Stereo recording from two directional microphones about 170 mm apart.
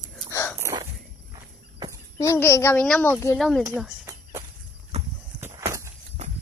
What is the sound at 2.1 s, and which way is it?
Speech, 15° left (ahead or behind).